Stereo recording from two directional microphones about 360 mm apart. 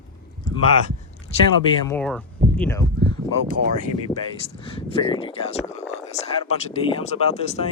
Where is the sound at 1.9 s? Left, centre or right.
Centre.